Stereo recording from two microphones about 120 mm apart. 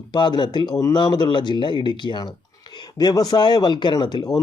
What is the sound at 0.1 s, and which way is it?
Speech, 40° left (ahead or behind).